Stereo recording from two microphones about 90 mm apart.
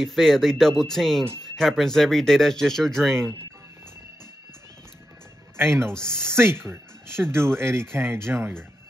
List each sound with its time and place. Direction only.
0.0 s speech: 5° left (ahead or behind)
5.9 s speech: 10° left (ahead or behind)
6.1 s speech: 30° right (ahead or behind)